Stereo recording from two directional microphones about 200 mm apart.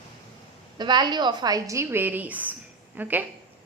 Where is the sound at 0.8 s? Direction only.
20° right (ahead or behind).